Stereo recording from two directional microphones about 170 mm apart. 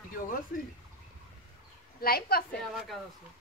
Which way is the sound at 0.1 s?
55° left (ahead or behind).